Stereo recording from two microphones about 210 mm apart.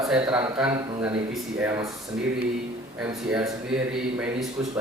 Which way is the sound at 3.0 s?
5° right (ahead or behind).